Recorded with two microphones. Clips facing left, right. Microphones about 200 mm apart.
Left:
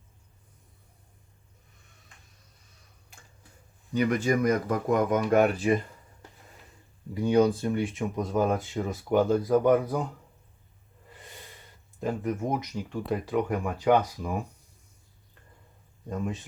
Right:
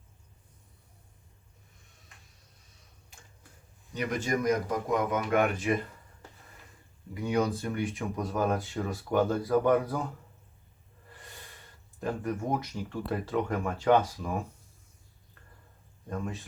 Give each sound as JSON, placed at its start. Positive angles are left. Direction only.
{"t": 1.8, "sound": "tick-tock", "side_deg": 0}
{"t": 4.2, "sound": "speech", "side_deg": 55}
{"t": 7.1, "sound": "speech", "side_deg": 30}
{"t": 11.1, "sound": "snort", "side_deg": 20}
{"t": 12.0, "sound": "speech", "side_deg": 20}
{"t": 16.1, "sound": "speech", "side_deg": 15}